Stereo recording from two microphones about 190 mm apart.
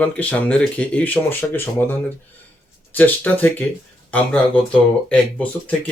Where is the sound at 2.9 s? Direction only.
10° left (ahead or behind).